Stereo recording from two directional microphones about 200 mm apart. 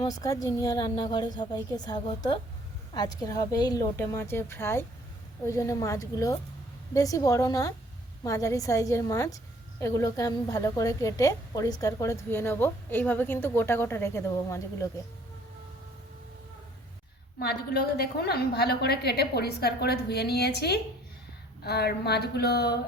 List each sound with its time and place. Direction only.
0.1 s a woman's voice: 15° left (ahead or behind)
17.4 s a woman's voice: 50° left (ahead or behind)